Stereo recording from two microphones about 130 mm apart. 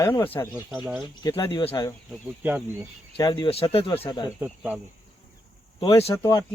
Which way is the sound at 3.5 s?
50° left (ahead or behind).